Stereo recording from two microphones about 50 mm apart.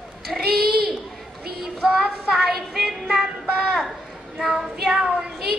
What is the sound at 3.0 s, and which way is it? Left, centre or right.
Music, centre.